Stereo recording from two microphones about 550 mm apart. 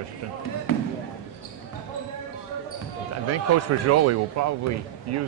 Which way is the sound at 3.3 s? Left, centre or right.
Right.